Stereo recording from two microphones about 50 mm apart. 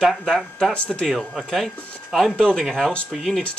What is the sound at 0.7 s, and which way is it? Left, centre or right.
Speech, left.